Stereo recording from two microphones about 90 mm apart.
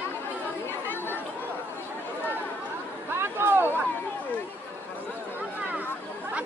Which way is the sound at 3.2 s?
25° right (ahead or behind).